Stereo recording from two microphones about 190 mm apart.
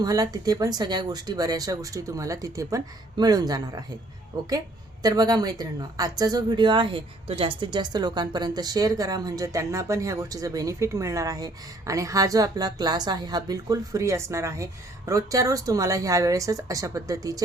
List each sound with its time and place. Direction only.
0.0 s a woman's voice: 20° right (ahead or behind)